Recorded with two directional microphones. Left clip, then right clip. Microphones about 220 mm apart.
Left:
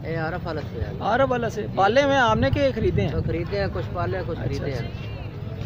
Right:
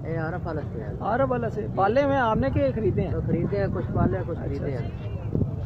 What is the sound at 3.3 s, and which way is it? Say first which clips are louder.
Speech: even; 5° left (ahead or behind).